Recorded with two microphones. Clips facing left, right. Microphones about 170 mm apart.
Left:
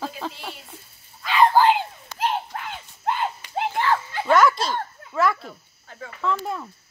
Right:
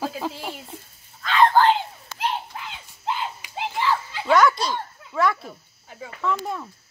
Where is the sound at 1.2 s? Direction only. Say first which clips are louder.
Even; 10° left (ahead or behind).